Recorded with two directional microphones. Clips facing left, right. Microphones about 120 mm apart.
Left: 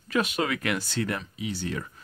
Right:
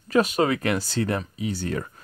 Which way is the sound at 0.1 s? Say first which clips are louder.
Right 6 dB; 40° right (ahead or behind).